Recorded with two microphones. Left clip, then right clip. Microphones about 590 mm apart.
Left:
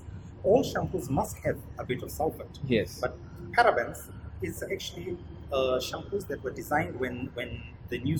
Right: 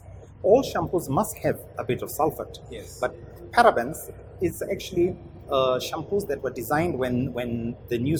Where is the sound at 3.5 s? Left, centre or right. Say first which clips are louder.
Right 5 dB; right.